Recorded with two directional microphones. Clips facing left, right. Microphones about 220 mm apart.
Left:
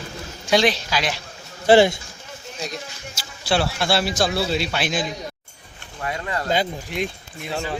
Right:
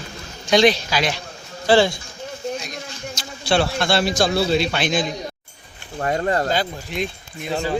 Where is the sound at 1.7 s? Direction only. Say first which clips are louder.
Left 2 dB; 20° left (ahead or behind).